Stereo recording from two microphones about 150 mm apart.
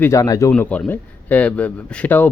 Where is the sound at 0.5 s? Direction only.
10° left (ahead or behind).